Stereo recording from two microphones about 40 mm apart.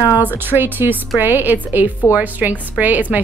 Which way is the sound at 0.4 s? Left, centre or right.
Right.